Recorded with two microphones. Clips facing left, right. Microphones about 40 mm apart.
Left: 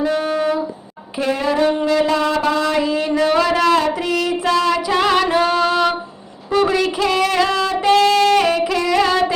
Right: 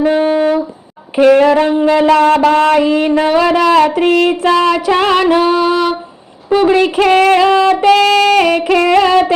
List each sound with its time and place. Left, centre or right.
0.1 s music: right
1.4 s a sound: right
1.8 s child singing: right
2.0 s music: right
3.2 s speech: right
3.8 s child singing: right
5.4 s music: centre
6.5 s a woman's voice: right
6.9 s music: right
7.3 s child singing: right
7.7 s music: right